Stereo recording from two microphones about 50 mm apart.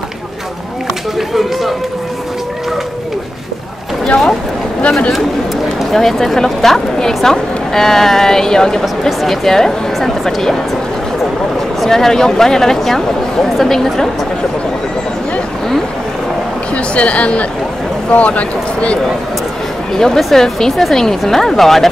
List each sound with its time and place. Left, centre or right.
1.1 s run: centre
5.8 s a woman's voice: centre
11.8 s a woman's voice: centre
16.7 s speech: left
19.9 s speech: centre